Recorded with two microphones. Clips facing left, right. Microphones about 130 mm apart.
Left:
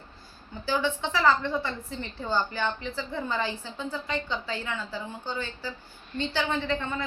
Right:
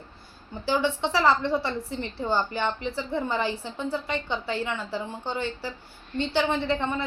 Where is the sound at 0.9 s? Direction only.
75° right (ahead or behind).